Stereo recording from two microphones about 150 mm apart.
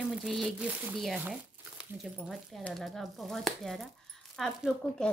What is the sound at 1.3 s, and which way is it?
Crumpling, 5° right (ahead or behind).